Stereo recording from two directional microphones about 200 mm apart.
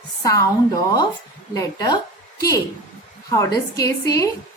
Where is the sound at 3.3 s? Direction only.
15° left (ahead or behind).